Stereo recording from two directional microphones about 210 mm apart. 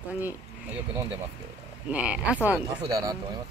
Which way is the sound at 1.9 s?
5° right (ahead or behind).